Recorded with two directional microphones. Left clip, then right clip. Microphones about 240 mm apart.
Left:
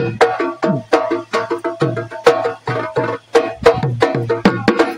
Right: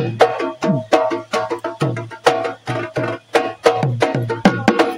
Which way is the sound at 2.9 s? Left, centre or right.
Right.